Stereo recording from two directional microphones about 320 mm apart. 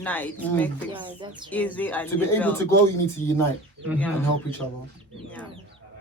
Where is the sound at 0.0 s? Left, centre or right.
Centre.